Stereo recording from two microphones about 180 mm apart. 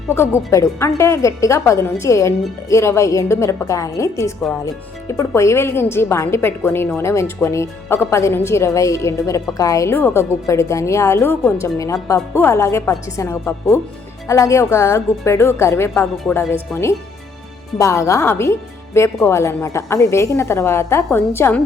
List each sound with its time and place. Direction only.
0.1 s speech: 15° left (ahead or behind)